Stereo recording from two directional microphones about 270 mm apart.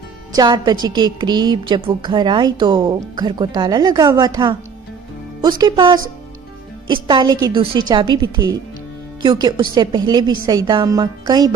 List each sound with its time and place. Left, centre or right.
0.3 s a woman's voice: centre